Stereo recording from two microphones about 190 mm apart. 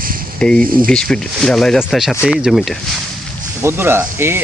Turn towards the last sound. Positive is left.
turn(degrees=-10)  # may be behind; listen again after turning